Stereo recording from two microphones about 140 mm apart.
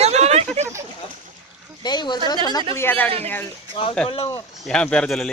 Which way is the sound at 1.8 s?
30° left (ahead or behind).